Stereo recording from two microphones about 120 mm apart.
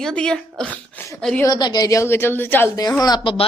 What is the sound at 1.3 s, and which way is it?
A woman's voice, 25° left (ahead or behind).